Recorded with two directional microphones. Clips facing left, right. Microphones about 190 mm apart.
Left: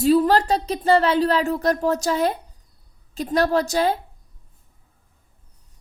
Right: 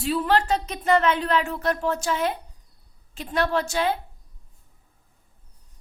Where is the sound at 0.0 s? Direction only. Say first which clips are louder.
Left 6 dB; 40° left (ahead or behind).